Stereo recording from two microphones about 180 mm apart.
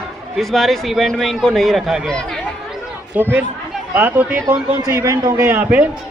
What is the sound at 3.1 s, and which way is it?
A man's voice, 10° right (ahead or behind).